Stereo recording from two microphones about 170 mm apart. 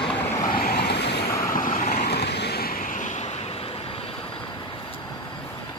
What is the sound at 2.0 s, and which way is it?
Waves, 75° left (ahead or behind).